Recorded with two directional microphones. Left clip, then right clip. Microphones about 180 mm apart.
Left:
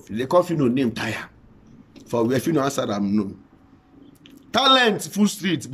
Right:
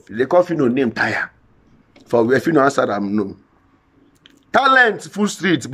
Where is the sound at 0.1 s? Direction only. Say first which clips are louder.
Right 4 dB; 20° left (ahead or behind).